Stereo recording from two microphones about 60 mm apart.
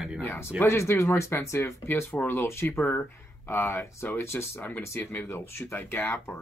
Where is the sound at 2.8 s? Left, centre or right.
Left.